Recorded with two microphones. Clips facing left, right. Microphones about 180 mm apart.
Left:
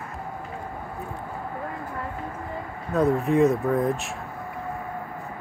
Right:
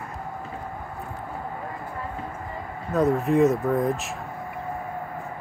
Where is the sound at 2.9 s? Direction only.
Centre (ahead or behind).